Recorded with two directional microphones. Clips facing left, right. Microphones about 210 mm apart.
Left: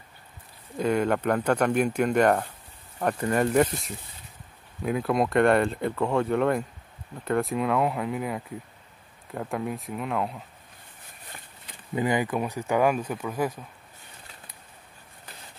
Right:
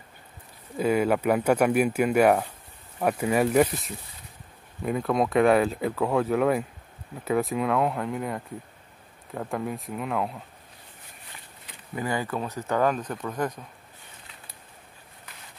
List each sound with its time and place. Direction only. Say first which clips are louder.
0.7 s speech: right 1 dB; 5° right (ahead or behind)
11.9 s speech: left 4 dB; 20° left (ahead or behind)